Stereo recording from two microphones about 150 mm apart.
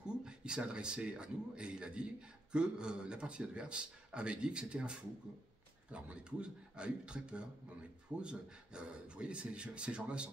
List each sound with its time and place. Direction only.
0.0 s speech: 5° right (ahead or behind)